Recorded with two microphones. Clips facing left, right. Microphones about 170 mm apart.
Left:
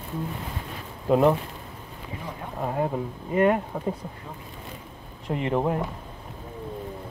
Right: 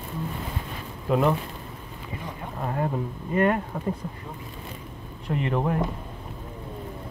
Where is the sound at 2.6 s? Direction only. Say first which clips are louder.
Left 1 dB; 15° left (ahead or behind).